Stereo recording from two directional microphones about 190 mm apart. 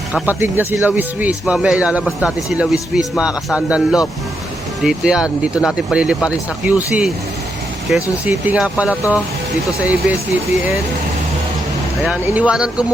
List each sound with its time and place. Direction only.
0.1 s speech: 10° right (ahead or behind)
12.0 s speech: 5° right (ahead or behind)